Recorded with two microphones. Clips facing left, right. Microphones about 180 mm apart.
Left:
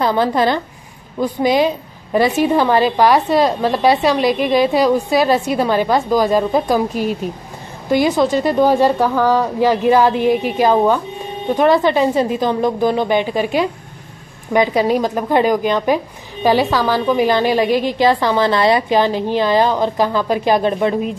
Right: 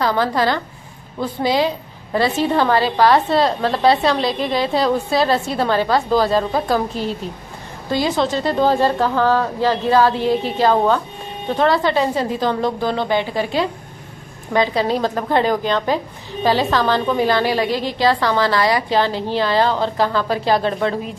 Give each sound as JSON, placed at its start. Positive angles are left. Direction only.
{"t": 0.0, "sound": "a woman's voice", "side_deg": 20}